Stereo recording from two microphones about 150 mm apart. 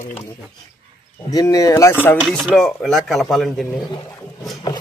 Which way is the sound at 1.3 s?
25° left (ahead or behind).